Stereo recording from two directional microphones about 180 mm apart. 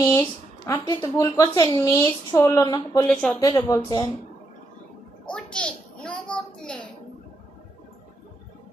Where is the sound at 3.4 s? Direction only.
20° left (ahead or behind).